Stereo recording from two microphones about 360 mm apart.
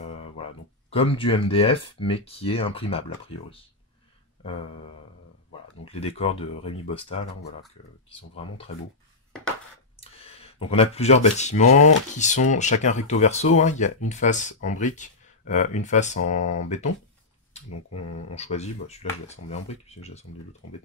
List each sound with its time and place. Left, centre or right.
0.0 s speech: centre
5.9 s speech: centre
9.9 s a sound: centre
11.3 s speech: centre
17.6 s speech: left
18.3 s speech: centre
20.6 s speech: left